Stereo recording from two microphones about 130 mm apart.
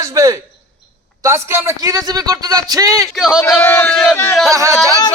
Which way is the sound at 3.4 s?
20° left (ahead or behind).